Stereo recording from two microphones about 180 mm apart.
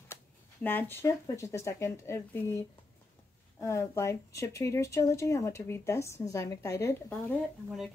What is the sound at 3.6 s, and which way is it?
Speech, 15° left (ahead or behind).